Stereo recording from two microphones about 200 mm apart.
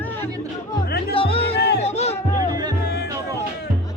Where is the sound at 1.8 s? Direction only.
30° left (ahead or behind).